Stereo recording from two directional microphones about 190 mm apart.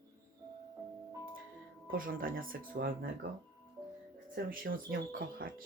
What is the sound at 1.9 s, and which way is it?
Speech, 45° right (ahead or behind).